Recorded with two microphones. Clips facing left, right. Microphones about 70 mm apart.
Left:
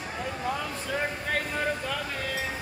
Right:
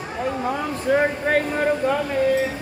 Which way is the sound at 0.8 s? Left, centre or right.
Right.